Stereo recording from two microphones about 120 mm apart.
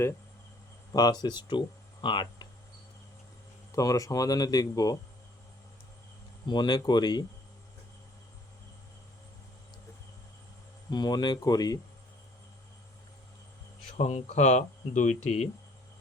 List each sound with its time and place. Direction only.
0.9 s speech: 35° left (ahead or behind)
3.7 s speech: 30° left (ahead or behind)
6.5 s speech: 40° left (ahead or behind)
10.9 s speech: 35° left (ahead or behind)
13.9 s speech: 65° left (ahead or behind)